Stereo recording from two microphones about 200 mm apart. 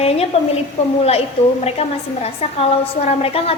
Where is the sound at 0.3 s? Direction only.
30° left (ahead or behind).